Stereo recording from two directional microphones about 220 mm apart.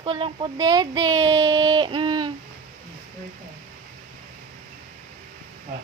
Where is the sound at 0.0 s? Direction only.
20° right (ahead or behind).